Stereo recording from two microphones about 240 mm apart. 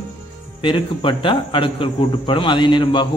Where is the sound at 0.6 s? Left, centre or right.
Left.